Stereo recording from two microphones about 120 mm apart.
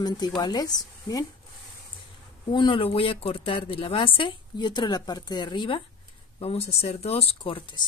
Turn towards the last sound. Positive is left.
turn(degrees=45)  # may be behind; listen again after turning